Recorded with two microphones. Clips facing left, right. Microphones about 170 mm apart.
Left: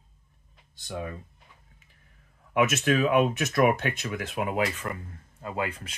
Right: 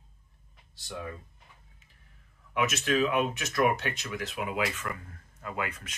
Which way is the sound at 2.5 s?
50° left (ahead or behind).